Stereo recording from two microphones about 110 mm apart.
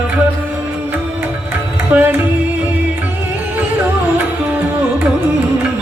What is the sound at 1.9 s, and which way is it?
Music, 15° right (ahead or behind).